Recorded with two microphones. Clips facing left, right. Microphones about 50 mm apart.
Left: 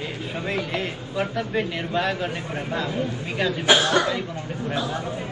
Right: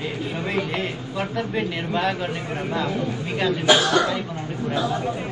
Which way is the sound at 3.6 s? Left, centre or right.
Left.